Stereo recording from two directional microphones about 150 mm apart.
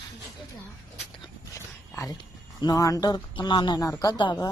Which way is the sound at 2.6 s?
25° left (ahead or behind).